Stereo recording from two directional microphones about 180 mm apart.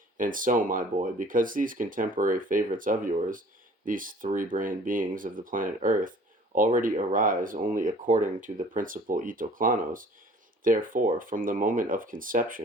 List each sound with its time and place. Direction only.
0.2 s speech: 50° right (ahead or behind)